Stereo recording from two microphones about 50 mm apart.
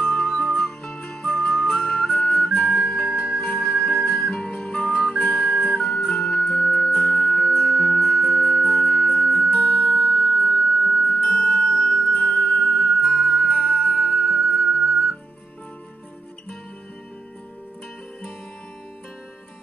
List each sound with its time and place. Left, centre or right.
0.0 s music: centre
1.8 s music: left
11.2 s music: centre
12.1 s music: left
13.0 s music: centre
13.4 s music: left
13.9 s music: centre